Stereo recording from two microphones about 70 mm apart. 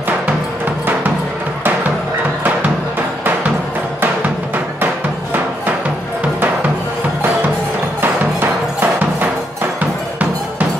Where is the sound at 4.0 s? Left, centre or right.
Right.